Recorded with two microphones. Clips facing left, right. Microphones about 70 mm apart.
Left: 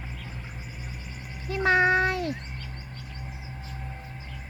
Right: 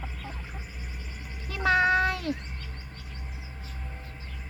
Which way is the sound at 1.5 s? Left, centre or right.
Left.